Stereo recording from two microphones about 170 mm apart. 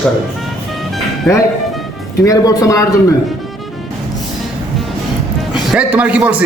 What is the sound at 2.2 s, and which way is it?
Speech, 20° left (ahead or behind).